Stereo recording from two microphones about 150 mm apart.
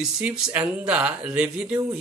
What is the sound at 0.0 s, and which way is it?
Speech, 10° right (ahead or behind).